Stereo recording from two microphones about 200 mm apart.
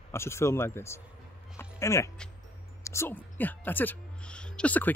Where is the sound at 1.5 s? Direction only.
15° left (ahead or behind).